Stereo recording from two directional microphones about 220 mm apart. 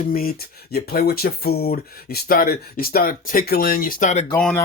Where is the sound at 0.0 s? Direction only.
40° left (ahead or behind).